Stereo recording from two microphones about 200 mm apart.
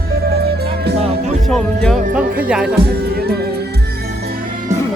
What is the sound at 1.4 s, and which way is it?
Speech, 5° left (ahead or behind).